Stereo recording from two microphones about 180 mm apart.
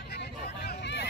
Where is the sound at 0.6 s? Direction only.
70° left (ahead or behind).